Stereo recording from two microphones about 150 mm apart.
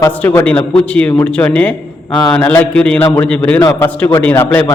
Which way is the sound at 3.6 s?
20° left (ahead or behind).